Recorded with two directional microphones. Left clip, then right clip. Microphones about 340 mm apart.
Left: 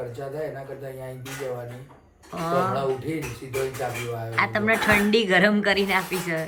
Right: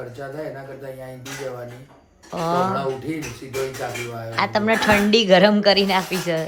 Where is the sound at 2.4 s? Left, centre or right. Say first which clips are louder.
Right 3 dB; centre.